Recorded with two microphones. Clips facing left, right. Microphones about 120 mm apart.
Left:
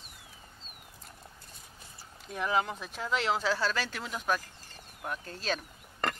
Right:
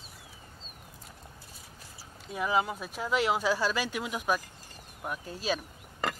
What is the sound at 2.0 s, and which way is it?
Speech, 5° right (ahead or behind).